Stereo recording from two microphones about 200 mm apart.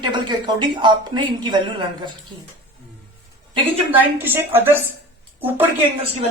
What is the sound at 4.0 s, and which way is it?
Speech, 10° right (ahead or behind).